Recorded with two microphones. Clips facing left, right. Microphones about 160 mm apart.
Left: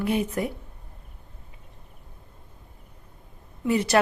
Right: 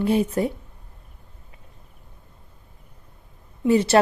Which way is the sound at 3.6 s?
30° right (ahead or behind).